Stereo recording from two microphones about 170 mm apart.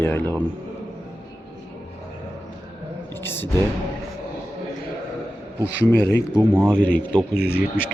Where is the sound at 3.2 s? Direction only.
15° left (ahead or behind).